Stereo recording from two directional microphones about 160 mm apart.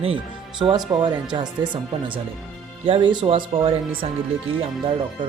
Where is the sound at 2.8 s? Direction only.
35° right (ahead or behind).